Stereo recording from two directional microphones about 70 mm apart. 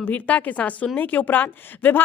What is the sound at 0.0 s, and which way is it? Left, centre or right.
A woman's voice, left.